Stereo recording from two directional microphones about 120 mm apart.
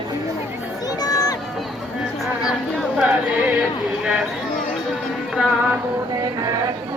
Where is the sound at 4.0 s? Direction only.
5° right (ahead or behind).